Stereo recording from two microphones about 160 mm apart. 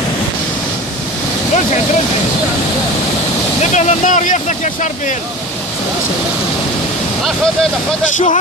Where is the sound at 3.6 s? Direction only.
50° left (ahead or behind).